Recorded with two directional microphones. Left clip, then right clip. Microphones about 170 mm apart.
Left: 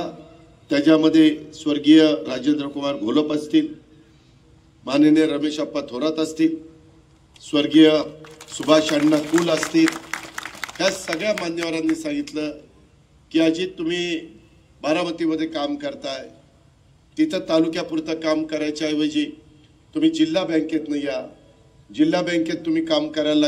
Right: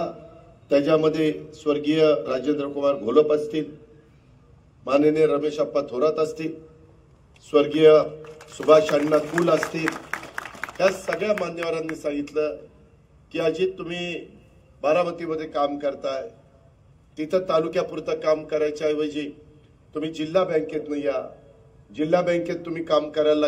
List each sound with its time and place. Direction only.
0.7 s a man's voice: 40° right (ahead or behind)
5.2 s a man's voice: 40° right (ahead or behind)
7.5 s a man's voice: 40° right (ahead or behind)